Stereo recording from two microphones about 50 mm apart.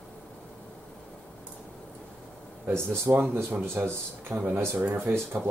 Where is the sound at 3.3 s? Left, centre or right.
Right.